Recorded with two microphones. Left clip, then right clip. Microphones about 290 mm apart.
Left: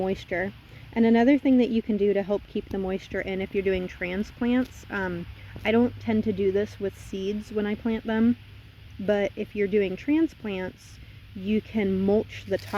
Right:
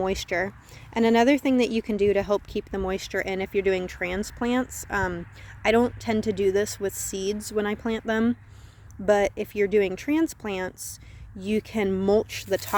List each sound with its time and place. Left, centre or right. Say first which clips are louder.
0.3 s speech: right 2 dB; right
7.1 s speech: right 3 dB; right
7.5 s speech: right 1 dB; right